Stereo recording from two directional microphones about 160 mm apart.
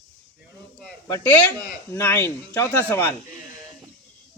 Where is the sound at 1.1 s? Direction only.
10° left (ahead or behind).